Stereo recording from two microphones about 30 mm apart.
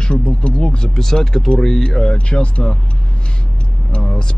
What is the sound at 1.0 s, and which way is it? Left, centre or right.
Speech, centre.